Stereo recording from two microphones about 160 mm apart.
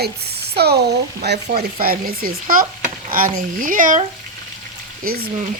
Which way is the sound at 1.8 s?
65° right (ahead or behind).